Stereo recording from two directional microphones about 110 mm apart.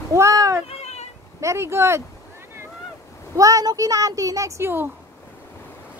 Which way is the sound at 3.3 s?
30° right (ahead or behind).